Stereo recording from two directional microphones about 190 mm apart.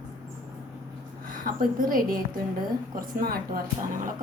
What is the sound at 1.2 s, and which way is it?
A woman's voice, 45° right (ahead or behind).